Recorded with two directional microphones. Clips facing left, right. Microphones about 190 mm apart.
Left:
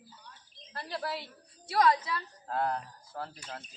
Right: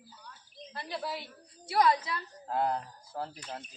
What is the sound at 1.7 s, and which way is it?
Speech, 20° right (ahead or behind).